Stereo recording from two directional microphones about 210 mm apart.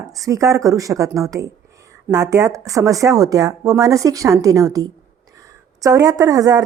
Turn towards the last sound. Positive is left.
turn(degrees=-15)  # may be behind; listen again after turning